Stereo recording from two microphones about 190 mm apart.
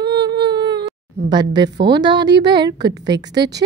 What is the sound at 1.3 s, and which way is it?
A woman's voice, 25° right (ahead or behind).